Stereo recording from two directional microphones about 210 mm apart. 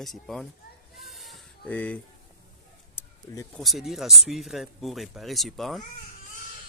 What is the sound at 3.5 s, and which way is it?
Speech, centre (ahead or behind).